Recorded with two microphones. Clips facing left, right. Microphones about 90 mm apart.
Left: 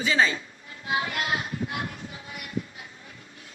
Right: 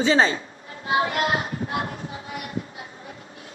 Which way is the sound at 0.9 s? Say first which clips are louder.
Right 6 dB; 40° right (ahead or behind).